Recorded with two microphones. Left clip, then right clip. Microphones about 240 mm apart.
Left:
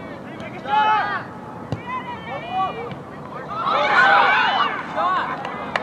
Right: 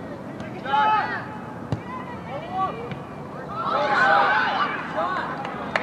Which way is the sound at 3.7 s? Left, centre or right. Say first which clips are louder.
Left 4 dB; left.